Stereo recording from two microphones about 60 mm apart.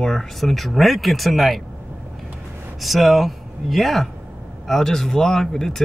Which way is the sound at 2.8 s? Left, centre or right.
Centre.